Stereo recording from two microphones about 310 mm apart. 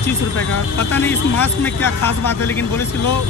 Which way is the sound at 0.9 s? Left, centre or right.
Centre.